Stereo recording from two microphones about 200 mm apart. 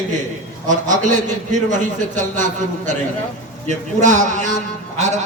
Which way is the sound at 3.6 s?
35° right (ahead or behind).